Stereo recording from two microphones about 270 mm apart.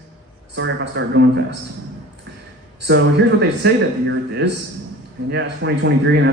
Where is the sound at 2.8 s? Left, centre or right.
Right.